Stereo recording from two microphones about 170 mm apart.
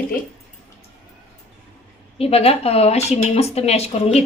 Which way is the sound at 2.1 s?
35° left (ahead or behind).